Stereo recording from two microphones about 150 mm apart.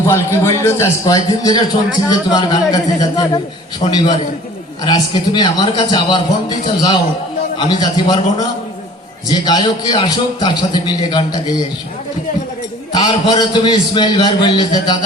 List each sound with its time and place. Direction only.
0.1 s a man's voice: 20° left (ahead or behind)
12.9 s a man's voice: 25° left (ahead or behind)